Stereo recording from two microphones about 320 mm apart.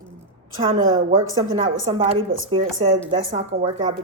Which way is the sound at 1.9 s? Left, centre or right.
Centre.